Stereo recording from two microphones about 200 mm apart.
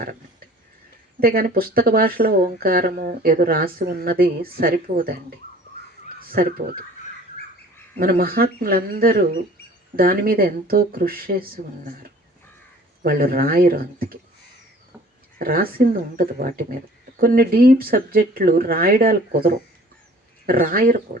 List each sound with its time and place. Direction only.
1.2 s speech: 45° right (ahead or behind)
6.1 s speech: 45° right (ahead or behind)
7.9 s speech: 45° right (ahead or behind)
13.0 s speech: 45° right (ahead or behind)
15.4 s speech: 45° right (ahead or behind)